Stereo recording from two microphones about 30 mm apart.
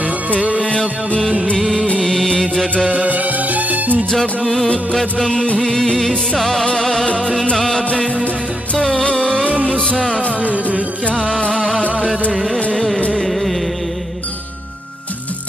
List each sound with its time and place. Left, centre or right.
1.6 s music: centre
3.1 s music: right
4.1 s music: centre
9.0 s music: left
10.4 s music: right
11.5 s music: centre